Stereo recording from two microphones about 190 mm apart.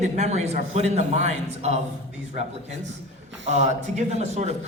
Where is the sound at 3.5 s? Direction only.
35° right (ahead or behind).